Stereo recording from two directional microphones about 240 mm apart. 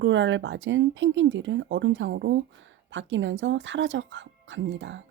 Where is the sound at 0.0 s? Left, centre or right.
Right.